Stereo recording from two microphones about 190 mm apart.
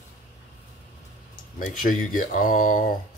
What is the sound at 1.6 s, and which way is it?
Speech, 45° left (ahead or behind).